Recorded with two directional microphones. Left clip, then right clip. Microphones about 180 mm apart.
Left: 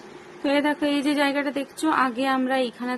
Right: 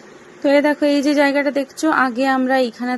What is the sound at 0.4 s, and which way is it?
A woman's voice, 25° right (ahead or behind).